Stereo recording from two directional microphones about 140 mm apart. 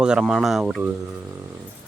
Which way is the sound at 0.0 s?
5° right (ahead or behind).